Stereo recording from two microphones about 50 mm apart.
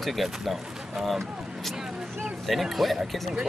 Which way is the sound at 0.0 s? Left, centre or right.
Centre.